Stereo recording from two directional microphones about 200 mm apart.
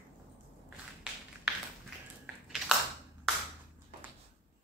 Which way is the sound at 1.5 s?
5° right (ahead or behind).